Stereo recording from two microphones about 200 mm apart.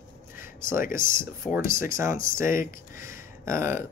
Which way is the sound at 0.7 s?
45° left (ahead or behind).